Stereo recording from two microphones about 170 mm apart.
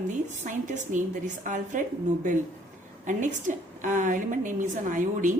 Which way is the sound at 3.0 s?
50° right (ahead or behind).